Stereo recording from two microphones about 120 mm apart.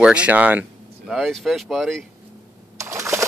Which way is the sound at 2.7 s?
25° right (ahead or behind).